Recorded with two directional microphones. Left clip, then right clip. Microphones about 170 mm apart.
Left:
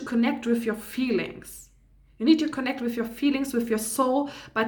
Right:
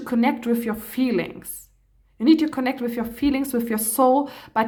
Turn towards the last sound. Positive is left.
turn(degrees=-40)  # may be behind; listen again after turning